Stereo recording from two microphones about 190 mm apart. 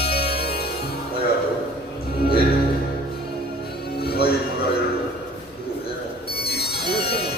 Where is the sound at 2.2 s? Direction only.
55° left (ahead or behind).